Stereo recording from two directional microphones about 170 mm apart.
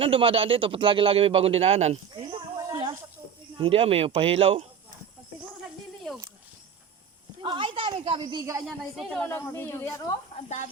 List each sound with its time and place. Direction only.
0.0 s a man's voice: 30° right (ahead or behind)
2.6 s snake: 20° right (ahead or behind)
3.6 s a man's voice: 35° right (ahead or behind)
7.4 s a woman's voice: 30° right (ahead or behind)
8.6 s speech: centre (ahead or behind)
9.2 s speech: 10° left (ahead or behind)
10.3 s speech: 45° left (ahead or behind)